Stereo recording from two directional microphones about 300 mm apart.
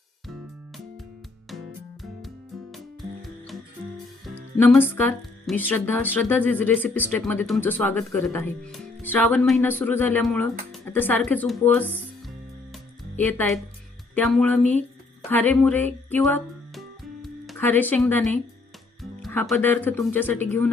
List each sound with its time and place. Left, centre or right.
2.7 s music: centre
4.5 s speech: centre
12.7 s music: centre
14.2 s speech: centre
15.3 s music: centre
19.2 s speech: centre